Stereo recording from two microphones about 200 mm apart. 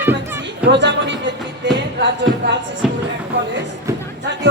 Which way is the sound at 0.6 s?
60° right (ahead or behind).